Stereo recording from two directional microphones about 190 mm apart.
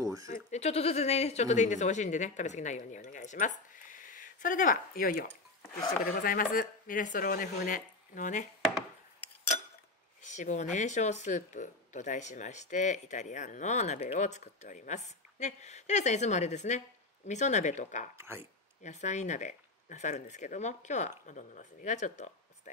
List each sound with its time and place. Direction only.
0.0 s bleat: 15° right (ahead or behind)
0.3 s speech: 35° left (ahead or behind)
10.2 s speech: 40° left (ahead or behind)
18.1 s speech: 15° right (ahead or behind)
18.4 s speech: 40° left (ahead or behind)